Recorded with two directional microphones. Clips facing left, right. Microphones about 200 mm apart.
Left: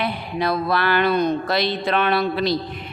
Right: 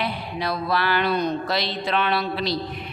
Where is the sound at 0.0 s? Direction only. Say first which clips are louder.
Left 4 dB; 55° left (ahead or behind).